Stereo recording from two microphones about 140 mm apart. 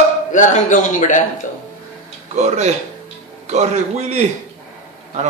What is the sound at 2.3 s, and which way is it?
A man's voice, 55° right (ahead or behind).